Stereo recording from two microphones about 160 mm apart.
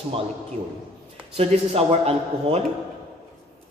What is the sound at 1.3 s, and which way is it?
Speech, 40° right (ahead or behind).